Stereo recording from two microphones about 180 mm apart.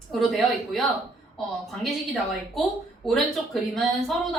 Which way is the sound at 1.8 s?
Centre (ahead or behind).